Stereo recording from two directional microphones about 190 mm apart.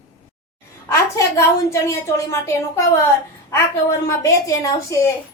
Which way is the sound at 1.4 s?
15° left (ahead or behind).